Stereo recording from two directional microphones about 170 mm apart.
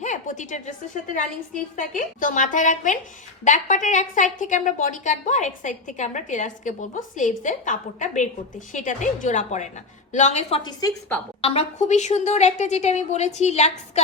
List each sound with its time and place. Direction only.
0.0 s a sound: 45° left (ahead or behind)
1.1 s a woman's voice: 50° left (ahead or behind)
10.6 s a woman's voice: 25° left (ahead or behind)
11.4 s a woman's voice: 40° left (ahead or behind)